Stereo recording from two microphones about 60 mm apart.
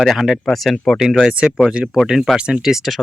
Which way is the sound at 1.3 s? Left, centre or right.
Centre.